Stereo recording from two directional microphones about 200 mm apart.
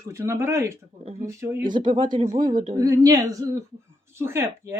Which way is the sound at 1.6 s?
25° right (ahead or behind).